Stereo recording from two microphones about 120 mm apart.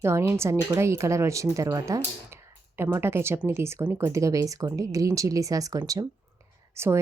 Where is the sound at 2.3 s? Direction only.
20° right (ahead or behind).